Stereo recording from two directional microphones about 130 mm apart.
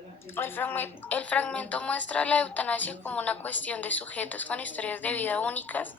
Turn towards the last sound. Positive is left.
turn(degrees=15)  # may be behind; listen again after turning